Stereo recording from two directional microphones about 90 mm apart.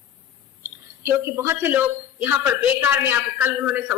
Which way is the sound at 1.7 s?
20° right (ahead or behind).